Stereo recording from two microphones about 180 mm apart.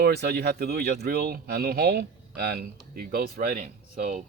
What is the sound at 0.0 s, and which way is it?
Speech, 65° right (ahead or behind).